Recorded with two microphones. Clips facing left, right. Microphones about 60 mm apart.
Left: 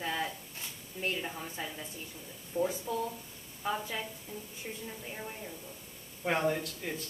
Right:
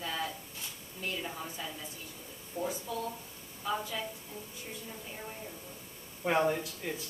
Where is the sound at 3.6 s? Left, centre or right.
Left.